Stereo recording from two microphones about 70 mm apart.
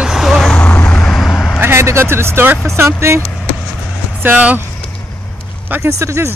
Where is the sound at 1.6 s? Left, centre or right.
Right.